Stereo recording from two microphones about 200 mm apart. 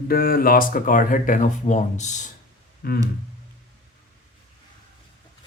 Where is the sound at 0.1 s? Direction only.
45° left (ahead or behind).